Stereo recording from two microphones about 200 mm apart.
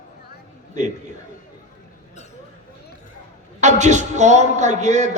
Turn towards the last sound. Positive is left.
turn(degrees=-35)  # may be behind; listen again after turning